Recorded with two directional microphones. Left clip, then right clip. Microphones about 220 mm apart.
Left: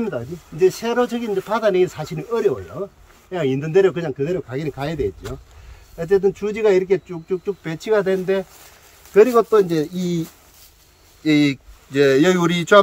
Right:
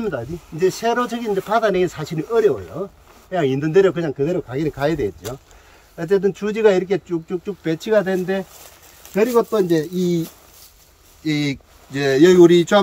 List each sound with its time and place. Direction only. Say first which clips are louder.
0.6 s speech: left 1 dB; 10° right (ahead or behind)
2.8 s speech: right 1 dB; 25° right (ahead or behind)
3.3 s speech: right 2 dB; 10° right (ahead or behind); by 10.2 s 5° left (ahead or behind)
11.2 s speech: left 5 dB; 10° left (ahead or behind)